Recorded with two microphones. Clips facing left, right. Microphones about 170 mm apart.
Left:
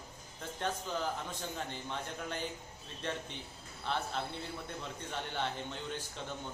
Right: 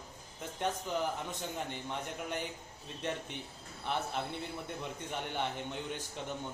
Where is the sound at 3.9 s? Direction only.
15° right (ahead or behind).